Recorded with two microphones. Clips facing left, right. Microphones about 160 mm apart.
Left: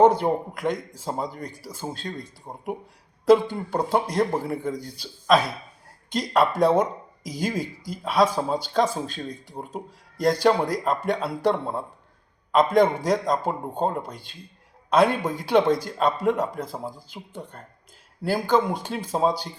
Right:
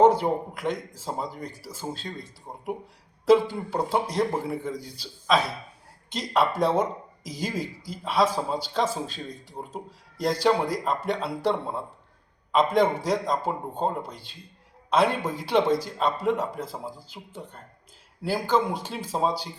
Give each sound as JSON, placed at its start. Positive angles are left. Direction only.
{"t": 0.0, "sound": "speech", "side_deg": -5}
{"t": 2.5, "sound": "speech", "side_deg": 20}
{"t": 3.2, "sound": "speech", "side_deg": -5}